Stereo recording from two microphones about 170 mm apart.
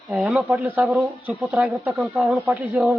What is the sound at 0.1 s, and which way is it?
A man's voice, 5° right (ahead or behind).